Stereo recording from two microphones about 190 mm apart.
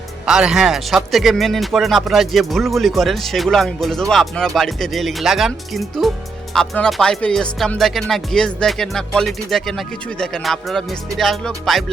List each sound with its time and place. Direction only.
0.3 s speech: 5° right (ahead or behind)